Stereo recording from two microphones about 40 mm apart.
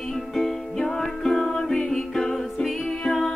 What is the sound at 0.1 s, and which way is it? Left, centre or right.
Music, centre.